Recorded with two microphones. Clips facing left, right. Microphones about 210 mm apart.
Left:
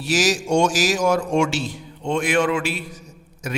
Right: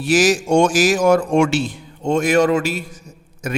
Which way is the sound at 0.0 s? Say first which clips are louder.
Right 5 dB; 55° right (ahead or behind).